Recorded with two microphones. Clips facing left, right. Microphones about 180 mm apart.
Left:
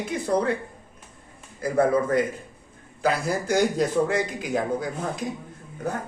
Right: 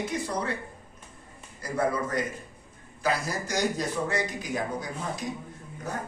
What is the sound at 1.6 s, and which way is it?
A man's voice, 55° left (ahead or behind).